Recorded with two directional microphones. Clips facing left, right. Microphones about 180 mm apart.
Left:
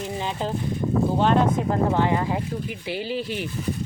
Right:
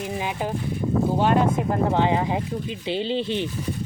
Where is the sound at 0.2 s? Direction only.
10° right (ahead or behind).